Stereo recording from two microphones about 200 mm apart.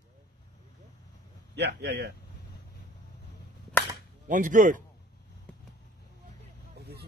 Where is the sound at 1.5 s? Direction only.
55° right (ahead or behind).